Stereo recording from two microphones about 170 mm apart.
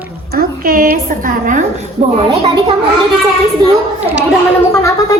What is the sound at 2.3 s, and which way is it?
Speech, 35° right (ahead or behind).